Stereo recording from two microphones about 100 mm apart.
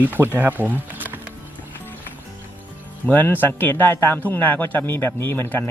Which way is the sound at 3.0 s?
20° left (ahead or behind).